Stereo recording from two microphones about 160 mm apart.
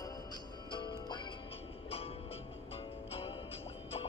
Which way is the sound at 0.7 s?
30° left (ahead or behind).